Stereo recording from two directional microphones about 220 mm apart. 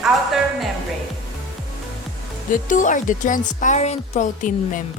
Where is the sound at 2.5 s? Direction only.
35° left (ahead or behind).